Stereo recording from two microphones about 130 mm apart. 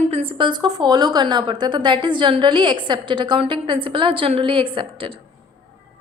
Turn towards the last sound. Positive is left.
turn(degrees=-45)  # may be behind; listen again after turning